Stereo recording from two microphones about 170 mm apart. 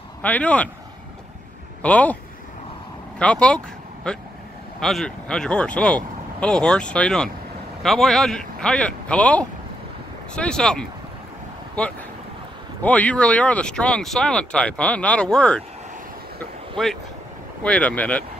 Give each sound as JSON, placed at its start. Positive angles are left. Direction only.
{"t": 0.2, "sound": "speech", "side_deg": 10}
{"t": 1.8, "sound": "speech", "side_deg": 10}
{"t": 3.2, "sound": "speech", "side_deg": 5}
{"t": 16.7, "sound": "speech", "side_deg": 0}